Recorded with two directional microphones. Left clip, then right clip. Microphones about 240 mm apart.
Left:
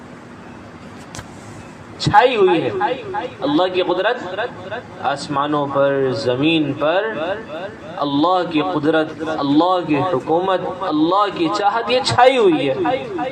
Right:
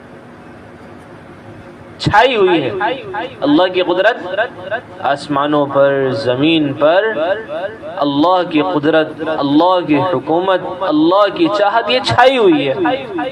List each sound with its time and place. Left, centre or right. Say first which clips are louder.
2.0 s a woman's voice: right 2 dB; right